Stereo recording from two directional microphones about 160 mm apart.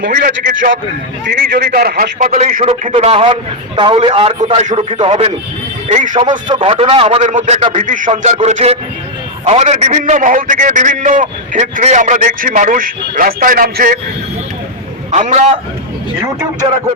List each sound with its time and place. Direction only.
0.0 s a man's voice: 65° right (ahead or behind)
1.3 s a man's voice: 85° right; by 2.6 s 50° right (ahead or behind)
2.9 s a man's voice: 35° right (ahead or behind); by 14.0 s 60° right (ahead or behind)
15.1 s a man's voice: 50° right (ahead or behind)